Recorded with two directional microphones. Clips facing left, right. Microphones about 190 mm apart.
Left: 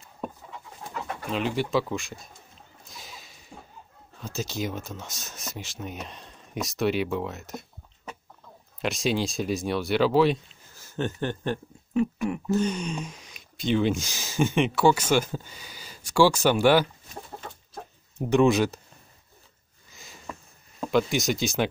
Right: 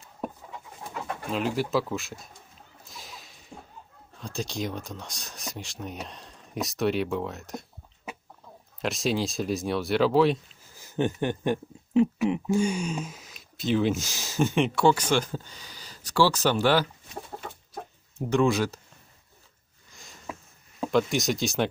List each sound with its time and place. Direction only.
1.3 s speech: centre (ahead or behind)
2.9 s a sound: centre (ahead or behind)
4.2 s speech: 5° left (ahead or behind)
8.8 s speech: centre (ahead or behind)
10.8 s speech: 15° right (ahead or behind); by 16.8 s 15° left (ahead or behind)
18.3 s speech: 20° left (ahead or behind)
19.9 s a sound: centre (ahead or behind)
20.8 s speech: centre (ahead or behind)